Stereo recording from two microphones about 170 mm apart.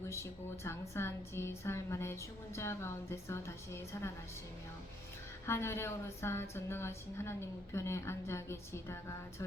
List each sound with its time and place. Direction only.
0.0 s a woman's voice: 15° left (ahead or behind)
5.5 s a woman's voice: 15° left (ahead or behind)